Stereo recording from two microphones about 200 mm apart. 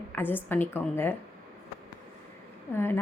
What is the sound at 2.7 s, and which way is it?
Speech, 10° left (ahead or behind).